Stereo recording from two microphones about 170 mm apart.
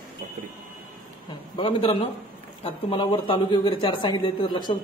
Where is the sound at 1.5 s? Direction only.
30° left (ahead or behind).